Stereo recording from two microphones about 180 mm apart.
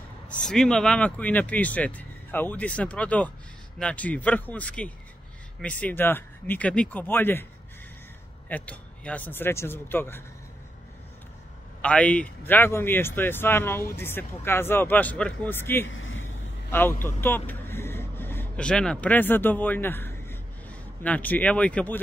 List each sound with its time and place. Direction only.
0.5 s speech: 5° left (ahead or behind)
8.5 s speech: 10° left (ahead or behind)
11.8 s speech: 5° left (ahead or behind)
15.9 s vehicle: 90° left
17.0 s speech: 10° left (ahead or behind)